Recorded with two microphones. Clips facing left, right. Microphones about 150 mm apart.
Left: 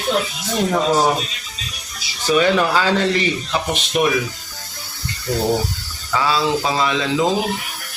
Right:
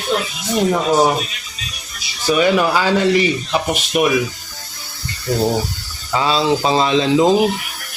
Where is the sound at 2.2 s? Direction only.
10° right (ahead or behind).